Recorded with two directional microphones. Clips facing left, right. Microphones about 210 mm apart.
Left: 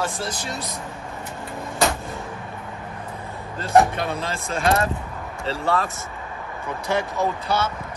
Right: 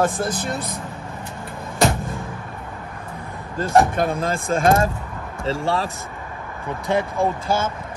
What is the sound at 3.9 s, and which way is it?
Speech, 50° right (ahead or behind).